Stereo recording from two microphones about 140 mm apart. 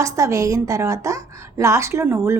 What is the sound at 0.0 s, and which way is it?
A woman's voice, 20° right (ahead or behind).